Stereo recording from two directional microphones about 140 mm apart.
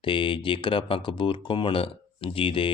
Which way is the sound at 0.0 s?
35° left (ahead or behind).